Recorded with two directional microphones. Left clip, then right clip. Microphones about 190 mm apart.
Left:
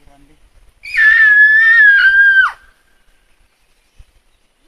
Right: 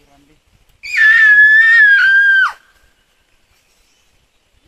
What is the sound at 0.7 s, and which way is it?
Screaming, 10° right (ahead or behind).